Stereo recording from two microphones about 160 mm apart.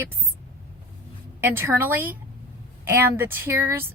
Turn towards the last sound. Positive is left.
turn(degrees=-15)  # may be behind; listen again after turning